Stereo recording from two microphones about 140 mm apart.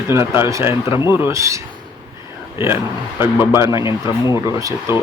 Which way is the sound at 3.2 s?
15° right (ahead or behind).